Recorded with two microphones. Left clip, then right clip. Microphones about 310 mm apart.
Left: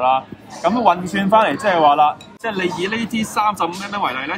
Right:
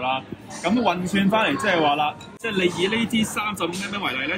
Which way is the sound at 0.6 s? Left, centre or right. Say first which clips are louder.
Left 7 dB; centre.